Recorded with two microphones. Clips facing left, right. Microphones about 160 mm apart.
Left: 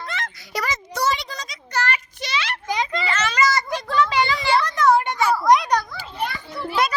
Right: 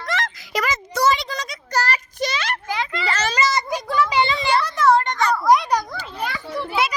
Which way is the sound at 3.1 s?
35° right (ahead or behind).